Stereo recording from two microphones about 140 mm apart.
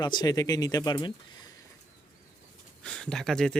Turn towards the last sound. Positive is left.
turn(degrees=5)  # may be behind; listen again after turning